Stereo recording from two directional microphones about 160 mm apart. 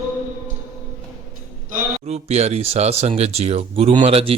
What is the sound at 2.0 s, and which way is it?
Speech, 40° right (ahead or behind).